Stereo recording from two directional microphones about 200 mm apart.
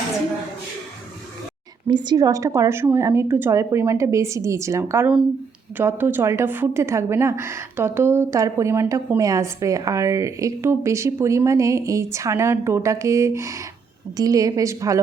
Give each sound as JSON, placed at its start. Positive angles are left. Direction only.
{"t": 1.9, "sound": "a woman's voice", "side_deg": -20}